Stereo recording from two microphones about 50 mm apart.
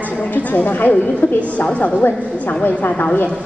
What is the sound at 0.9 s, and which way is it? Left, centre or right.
A woman's voice, left.